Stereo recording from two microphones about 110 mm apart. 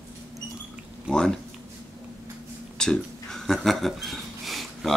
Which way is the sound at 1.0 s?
5° left (ahead or behind).